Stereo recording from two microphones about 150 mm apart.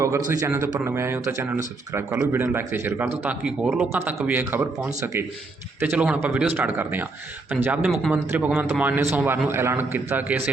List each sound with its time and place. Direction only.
0.3 s a man's voice: 15° right (ahead or behind); by 8.1 s centre (ahead or behind)
8.1 s speech: 10° right (ahead or behind)